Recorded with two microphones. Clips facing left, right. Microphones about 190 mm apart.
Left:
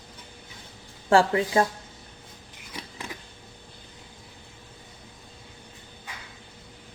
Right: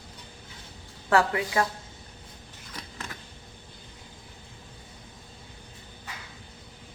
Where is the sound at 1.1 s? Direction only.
30° left (ahead or behind).